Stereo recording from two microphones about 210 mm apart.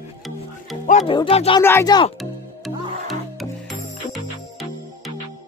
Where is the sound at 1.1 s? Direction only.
25° left (ahead or behind).